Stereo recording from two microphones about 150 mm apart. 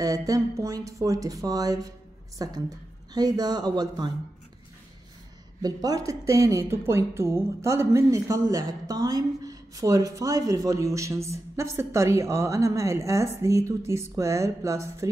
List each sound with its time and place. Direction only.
0.0 s a woman's voice: 25° right (ahead or behind)
5.6 s a woman's voice: 25° right (ahead or behind)